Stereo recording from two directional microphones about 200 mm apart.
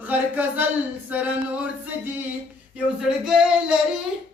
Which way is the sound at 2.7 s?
5° right (ahead or behind).